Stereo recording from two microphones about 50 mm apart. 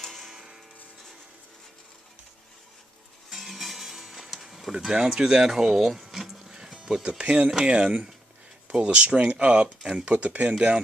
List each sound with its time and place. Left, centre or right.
0.0 s tick-tock: centre
0.3 s tick-tock: centre
3.2 s music: centre
7.0 s speech: right